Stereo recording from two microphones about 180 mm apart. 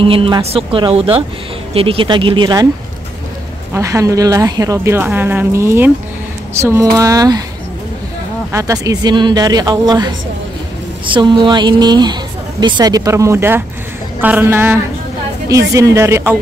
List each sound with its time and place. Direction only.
0.0 s a woman's voice: 30° right (ahead or behind)
3.7 s a woman's voice: 15° right (ahead or behind)
8.5 s a woman's voice: 15° right (ahead or behind)